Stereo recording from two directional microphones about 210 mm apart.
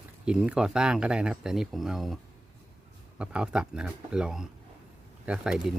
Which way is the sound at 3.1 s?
5° right (ahead or behind).